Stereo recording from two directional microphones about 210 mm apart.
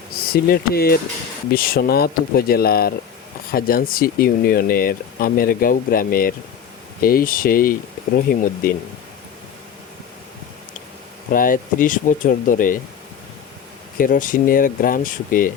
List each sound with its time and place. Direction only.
0.4 s speech: 45° left (ahead or behind)
11.3 s speech: 40° left (ahead or behind)
14.0 s speech: 40° left (ahead or behind)